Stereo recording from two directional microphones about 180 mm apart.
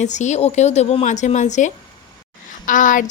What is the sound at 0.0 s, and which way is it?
Speech, 40° left (ahead or behind).